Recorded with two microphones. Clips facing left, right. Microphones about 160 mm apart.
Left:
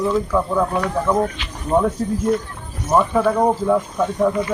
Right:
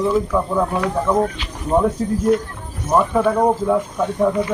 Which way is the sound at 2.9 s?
Centre (ahead or behind).